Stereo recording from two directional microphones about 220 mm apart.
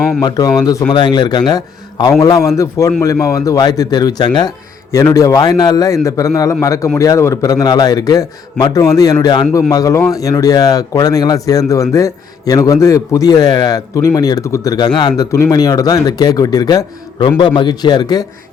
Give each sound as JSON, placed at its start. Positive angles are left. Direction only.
{"t": 0.2, "sound": "speech", "side_deg": 15}